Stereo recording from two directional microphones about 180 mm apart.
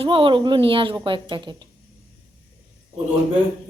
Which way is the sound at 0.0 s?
30° right (ahead or behind).